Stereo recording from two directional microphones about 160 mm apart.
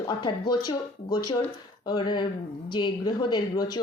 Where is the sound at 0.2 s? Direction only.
25° left (ahead or behind).